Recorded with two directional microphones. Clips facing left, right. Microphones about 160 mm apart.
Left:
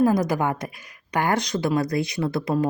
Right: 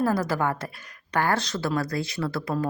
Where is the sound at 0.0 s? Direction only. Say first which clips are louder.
Left 4 dB; 15° left (ahead or behind).